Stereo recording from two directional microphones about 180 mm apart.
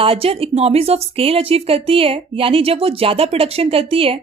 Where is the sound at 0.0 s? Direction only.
30° right (ahead or behind).